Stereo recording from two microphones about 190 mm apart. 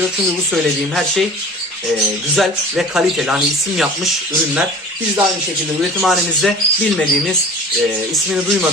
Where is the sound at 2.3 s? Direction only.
Centre (ahead or behind).